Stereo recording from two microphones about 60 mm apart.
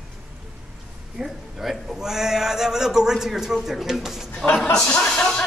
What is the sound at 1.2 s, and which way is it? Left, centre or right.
A man's voice, centre.